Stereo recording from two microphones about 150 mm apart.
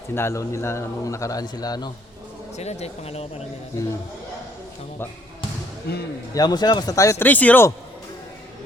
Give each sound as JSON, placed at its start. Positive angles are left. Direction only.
{"t": 0.1, "sound": "a man's voice", "side_deg": 15}
{"t": 2.6, "sound": "speech", "side_deg": 45}
{"t": 5.9, "sound": "speech", "side_deg": 90}
{"t": 6.3, "sound": "a man's voice", "side_deg": 25}